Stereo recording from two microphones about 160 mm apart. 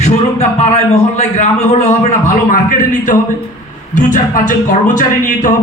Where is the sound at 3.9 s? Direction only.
50° left (ahead or behind).